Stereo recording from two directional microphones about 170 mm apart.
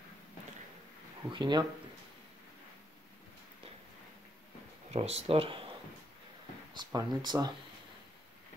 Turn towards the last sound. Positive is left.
turn(degrees=-25)  # may be behind; listen again after turning